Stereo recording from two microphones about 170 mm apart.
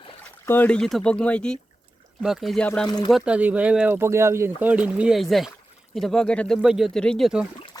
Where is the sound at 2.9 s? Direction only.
25° left (ahead or behind).